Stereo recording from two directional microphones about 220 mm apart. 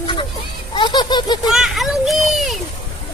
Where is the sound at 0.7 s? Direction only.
20° left (ahead or behind).